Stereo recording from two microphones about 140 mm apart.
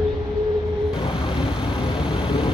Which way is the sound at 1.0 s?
35° left (ahead or behind).